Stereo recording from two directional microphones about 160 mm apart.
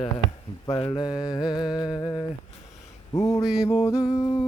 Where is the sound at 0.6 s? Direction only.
25° left (ahead or behind).